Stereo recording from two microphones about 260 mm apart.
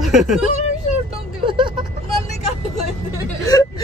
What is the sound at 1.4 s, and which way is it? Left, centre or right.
Vehicle, centre.